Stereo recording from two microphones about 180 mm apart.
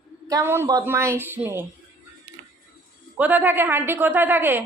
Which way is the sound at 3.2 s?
10° right (ahead or behind).